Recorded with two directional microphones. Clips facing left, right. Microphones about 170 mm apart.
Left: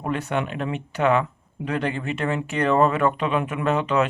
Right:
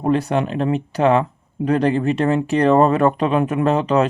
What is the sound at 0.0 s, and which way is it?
Speech, 35° right (ahead or behind).